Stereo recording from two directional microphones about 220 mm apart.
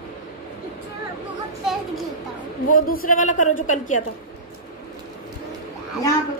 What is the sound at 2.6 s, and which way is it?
A woman's voice, 40° left (ahead or behind).